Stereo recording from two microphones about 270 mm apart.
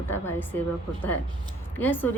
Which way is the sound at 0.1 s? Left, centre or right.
Centre.